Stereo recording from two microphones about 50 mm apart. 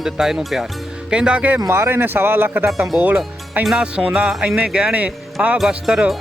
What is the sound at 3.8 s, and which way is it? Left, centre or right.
Speech, right.